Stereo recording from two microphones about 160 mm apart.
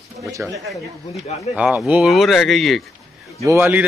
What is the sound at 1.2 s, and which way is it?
Speech, 40° left (ahead or behind).